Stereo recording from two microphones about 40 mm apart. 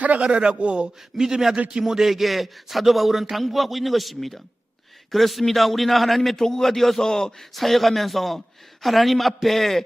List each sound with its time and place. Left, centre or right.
0.0 s a sound: right
0.3 s a man's voice: right
1.1 s a man's voice: centre
7.5 s a man's voice: centre